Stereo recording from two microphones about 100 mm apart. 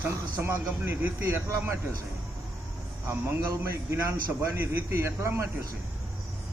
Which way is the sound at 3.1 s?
25° right (ahead or behind).